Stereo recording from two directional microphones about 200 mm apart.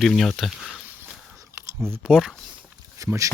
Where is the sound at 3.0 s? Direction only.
15° right (ahead or behind).